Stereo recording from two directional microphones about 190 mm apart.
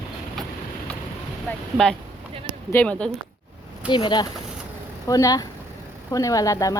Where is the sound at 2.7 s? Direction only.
5° left (ahead or behind).